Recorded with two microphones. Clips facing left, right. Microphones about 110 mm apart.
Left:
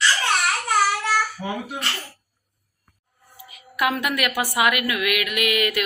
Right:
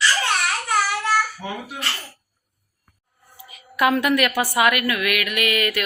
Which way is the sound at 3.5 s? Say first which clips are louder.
Right 4 dB; 5° left (ahead or behind).